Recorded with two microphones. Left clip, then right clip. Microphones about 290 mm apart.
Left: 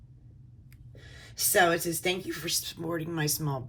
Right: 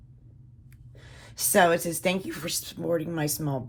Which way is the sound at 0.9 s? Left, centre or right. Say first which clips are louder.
Even; centre.